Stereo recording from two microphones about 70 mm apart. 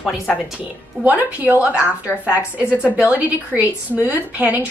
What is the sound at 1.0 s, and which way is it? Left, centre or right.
A woman's voice, right.